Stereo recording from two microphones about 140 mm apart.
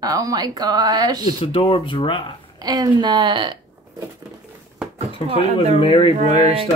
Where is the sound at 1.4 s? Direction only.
40° left (ahead or behind).